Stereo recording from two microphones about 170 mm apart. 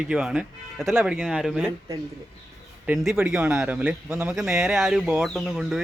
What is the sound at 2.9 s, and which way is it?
Speech, centre (ahead or behind).